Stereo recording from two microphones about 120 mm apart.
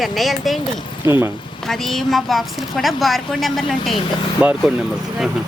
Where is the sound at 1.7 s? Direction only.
5° left (ahead or behind).